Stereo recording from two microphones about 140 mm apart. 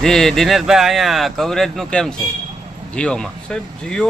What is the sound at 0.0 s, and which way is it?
A man's voice, 5° left (ahead or behind).